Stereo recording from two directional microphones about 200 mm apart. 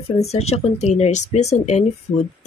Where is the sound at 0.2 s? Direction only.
30° left (ahead or behind).